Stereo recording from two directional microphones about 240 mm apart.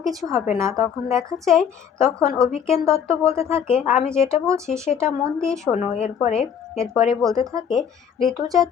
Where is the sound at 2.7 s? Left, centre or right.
Centre.